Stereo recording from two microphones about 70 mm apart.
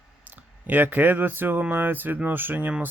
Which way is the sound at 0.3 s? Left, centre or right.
Right.